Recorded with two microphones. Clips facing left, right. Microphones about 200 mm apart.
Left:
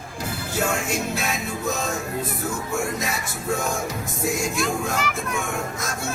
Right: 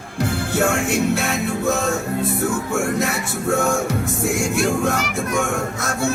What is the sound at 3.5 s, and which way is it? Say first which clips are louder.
Music: right 6 dB; 75° right (ahead or behind).